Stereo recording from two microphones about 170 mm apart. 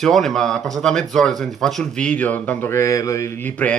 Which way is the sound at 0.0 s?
Centre (ahead or behind).